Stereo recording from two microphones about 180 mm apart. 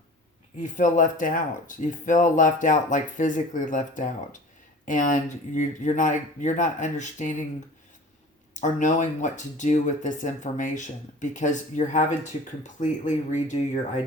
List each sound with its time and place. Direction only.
0.6 s speech: 45° left (ahead or behind)
8.5 s speech: 45° left (ahead or behind)